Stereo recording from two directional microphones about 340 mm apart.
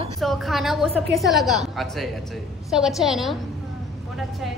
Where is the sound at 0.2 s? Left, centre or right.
Centre.